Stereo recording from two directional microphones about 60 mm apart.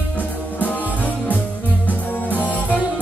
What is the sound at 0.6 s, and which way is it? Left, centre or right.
Music, left.